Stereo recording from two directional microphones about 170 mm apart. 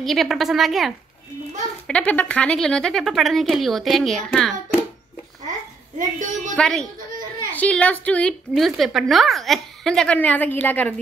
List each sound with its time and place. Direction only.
0.0 s a woman's voice: centre (ahead or behind)
5.9 s a woman's voice: 50° right (ahead or behind)
6.5 s a woman's voice: 5° left (ahead or behind)